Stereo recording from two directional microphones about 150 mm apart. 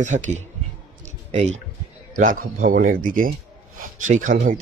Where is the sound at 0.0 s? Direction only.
55° right (ahead or behind).